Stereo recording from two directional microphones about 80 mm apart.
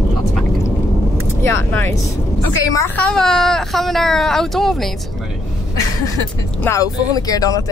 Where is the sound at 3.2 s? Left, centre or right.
Centre.